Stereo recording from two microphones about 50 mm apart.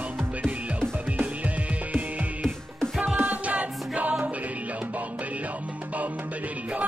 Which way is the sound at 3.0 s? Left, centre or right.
Right.